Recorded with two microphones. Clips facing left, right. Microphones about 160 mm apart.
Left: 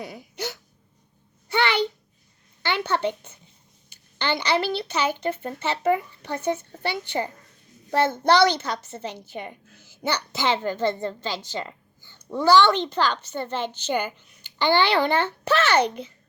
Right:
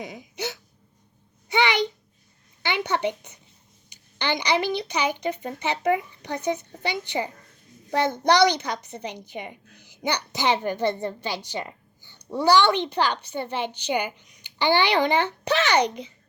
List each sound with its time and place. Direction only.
1.5 s a child's voice: 15° right (ahead or behind)